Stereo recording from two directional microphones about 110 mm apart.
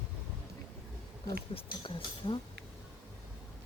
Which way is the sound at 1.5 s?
50° left (ahead or behind).